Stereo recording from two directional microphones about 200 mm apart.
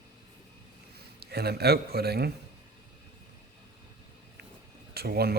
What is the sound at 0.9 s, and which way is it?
A man's voice, 55° right (ahead or behind).